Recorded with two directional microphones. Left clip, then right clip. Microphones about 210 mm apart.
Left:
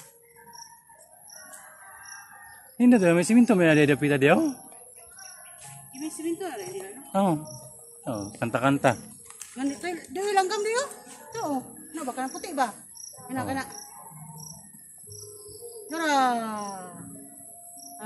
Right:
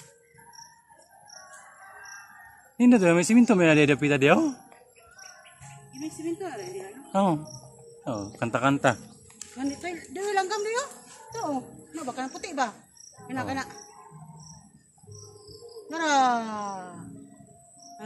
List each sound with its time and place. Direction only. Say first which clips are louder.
2.8 s speech: even; 20° right (ahead or behind)
5.9 s speech: left 1 dB; centre (ahead or behind)
7.1 s a man's voice: even; 15° right (ahead or behind)
9.6 s speech: left 2 dB; 20° left (ahead or behind)
11.3 s speech: left 1 dB; 5° left (ahead or behind)
12.2 s a man's voice: left 2 dB; 20° right (ahead or behind)
15.9 s speech: right 1 dB; 25° right (ahead or behind)